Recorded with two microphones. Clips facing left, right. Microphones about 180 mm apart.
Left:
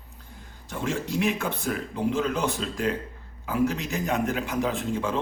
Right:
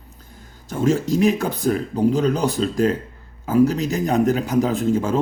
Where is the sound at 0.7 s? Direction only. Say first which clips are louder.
Right 10 dB; 40° right (ahead or behind).